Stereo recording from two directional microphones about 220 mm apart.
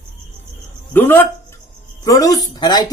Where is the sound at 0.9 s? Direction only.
10° left (ahead or behind).